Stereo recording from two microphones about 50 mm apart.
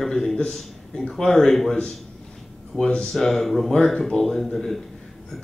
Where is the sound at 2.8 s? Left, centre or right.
Centre.